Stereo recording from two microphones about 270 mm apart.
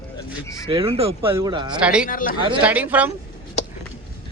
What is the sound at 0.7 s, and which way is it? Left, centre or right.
Speech, right.